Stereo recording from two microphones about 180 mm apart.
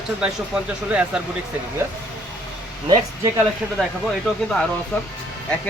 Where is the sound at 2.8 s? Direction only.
25° right (ahead or behind).